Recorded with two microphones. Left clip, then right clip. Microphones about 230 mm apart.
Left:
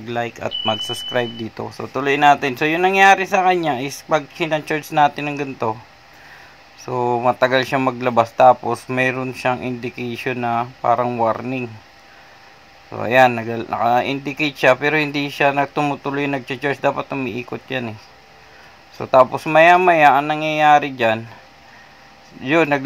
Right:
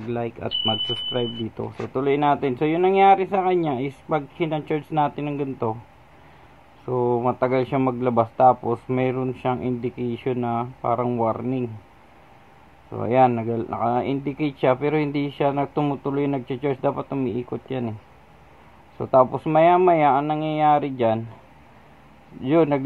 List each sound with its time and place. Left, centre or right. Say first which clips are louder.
0.2 s speech: left 3 dB; left
2.4 s speech: left 3 dB; centre
6.9 s speech: left 4 dB; left
12.9 s speech: left 5 dB; left
15.9 s speech: left 3 dB; left
16.2 s speech: left 3 dB; centre
19.4 s speech: left 5 dB; centre
22.5 s speech: left 3 dB; centre